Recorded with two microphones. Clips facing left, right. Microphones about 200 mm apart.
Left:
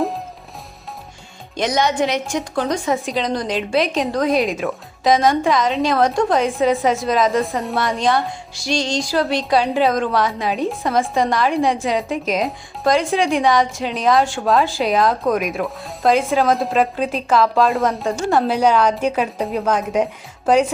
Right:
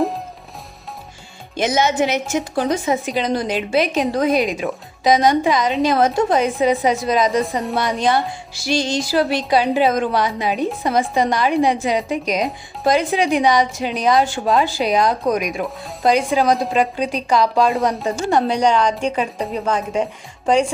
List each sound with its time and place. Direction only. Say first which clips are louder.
1.5 s a woman's voice: right 1 dB; 5° right (ahead or behind)